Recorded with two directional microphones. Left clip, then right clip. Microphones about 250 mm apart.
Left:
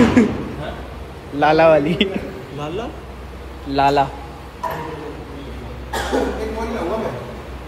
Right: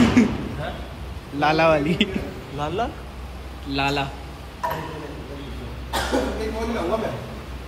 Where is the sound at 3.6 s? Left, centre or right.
Centre.